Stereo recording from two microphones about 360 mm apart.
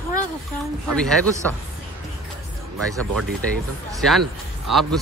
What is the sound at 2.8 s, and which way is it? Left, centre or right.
Speech, centre.